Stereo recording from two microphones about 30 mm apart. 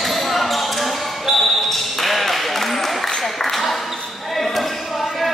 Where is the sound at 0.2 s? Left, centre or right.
Centre.